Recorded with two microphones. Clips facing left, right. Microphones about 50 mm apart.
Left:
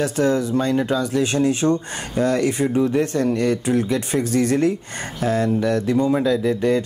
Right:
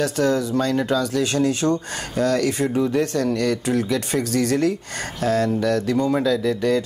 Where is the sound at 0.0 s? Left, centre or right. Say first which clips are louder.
Left 1 dB; centre.